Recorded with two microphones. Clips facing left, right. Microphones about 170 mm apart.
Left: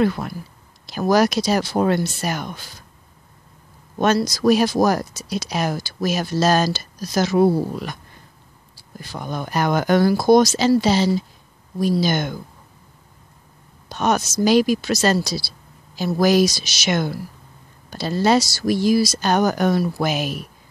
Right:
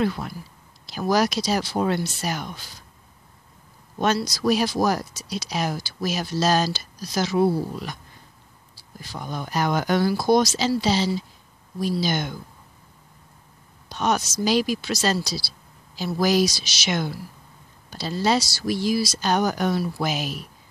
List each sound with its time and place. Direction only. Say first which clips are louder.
0.0 s speech: left 5 dB; 55° left (ahead or behind)
4.0 s speech: left 5 dB; 50° left (ahead or behind)
9.0 s speech: left 4 dB; 55° left (ahead or behind)
13.8 s a woman's voice: left 3 dB; 50° left (ahead or behind)